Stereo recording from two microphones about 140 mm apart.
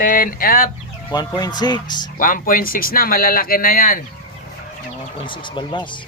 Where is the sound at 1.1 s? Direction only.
30° left (ahead or behind).